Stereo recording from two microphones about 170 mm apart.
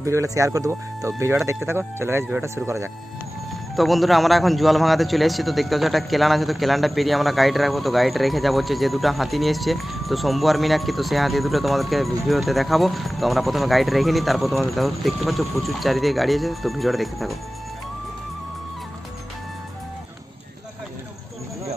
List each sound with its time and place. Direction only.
0.0 s speech: 20° right (ahead or behind)
3.7 s a man's voice: centre (ahead or behind)